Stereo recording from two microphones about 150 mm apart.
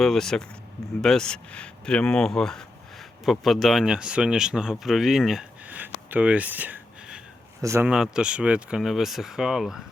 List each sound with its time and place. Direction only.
0.0 s a man's voice: centre (ahead or behind); by 7.9 s 20° right (ahead or behind)
7.9 s speech: 5° right (ahead or behind)